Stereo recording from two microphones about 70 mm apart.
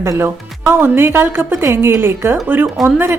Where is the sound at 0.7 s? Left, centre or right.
Right.